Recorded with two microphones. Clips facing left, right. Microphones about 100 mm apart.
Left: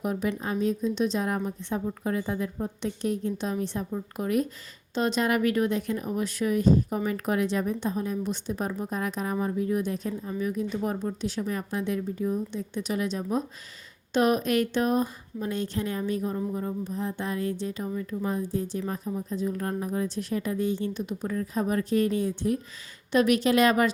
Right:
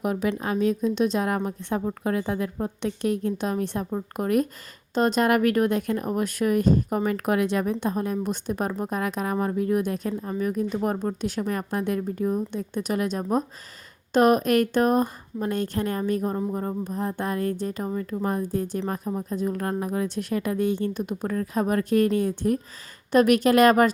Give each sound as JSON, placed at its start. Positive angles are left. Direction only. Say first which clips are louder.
{"t": 0.0, "sound": "a woman's voice", "louder": "right 3 dB", "side_deg": -75}